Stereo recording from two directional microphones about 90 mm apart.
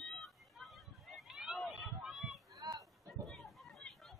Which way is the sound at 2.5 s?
45° right (ahead or behind).